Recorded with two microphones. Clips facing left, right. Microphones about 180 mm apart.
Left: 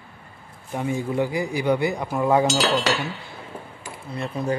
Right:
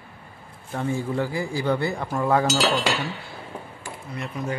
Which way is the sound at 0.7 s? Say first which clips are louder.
Left 2 dB; 15° left (ahead or behind).